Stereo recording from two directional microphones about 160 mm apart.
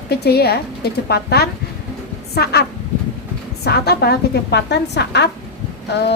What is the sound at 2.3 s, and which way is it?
Speech, 80° left.